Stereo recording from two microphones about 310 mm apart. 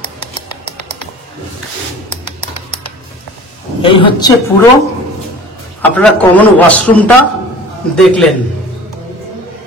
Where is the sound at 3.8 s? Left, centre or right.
Centre.